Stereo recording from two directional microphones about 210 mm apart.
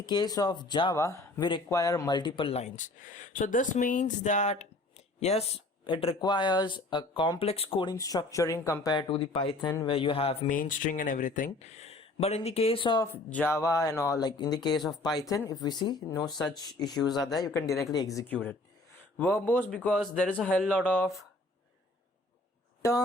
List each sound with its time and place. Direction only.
0.0 s speech: 20° left (ahead or behind)
10.5 s speech: 40° left (ahead or behind); by 13.1 s 20° left (ahead or behind)
13.3 s a man's voice: 10° left (ahead or behind)
17.7 s speech: centre (ahead or behind)
17.9 s a man's voice: 15° left (ahead or behind)